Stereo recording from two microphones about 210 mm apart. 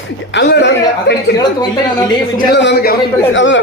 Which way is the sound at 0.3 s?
55° left (ahead or behind).